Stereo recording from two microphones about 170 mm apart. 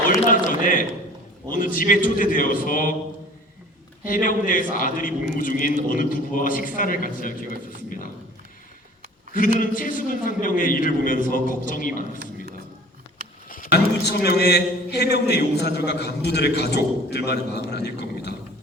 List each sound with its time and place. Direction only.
0.1 s a man's voice: 50° left (ahead or behind)
4.0 s a man's voice: 55° left (ahead or behind)
9.6 s a man's voice: 50° left (ahead or behind)
13.5 s a man's voice: 65° left (ahead or behind)